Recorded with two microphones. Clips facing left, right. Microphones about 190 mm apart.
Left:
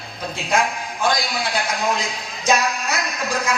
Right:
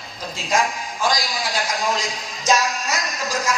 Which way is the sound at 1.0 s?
60° left (ahead or behind).